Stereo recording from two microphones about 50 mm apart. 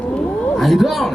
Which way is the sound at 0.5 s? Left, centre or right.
Centre.